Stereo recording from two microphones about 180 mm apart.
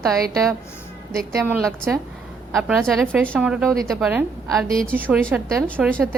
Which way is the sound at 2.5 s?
Centre (ahead or behind).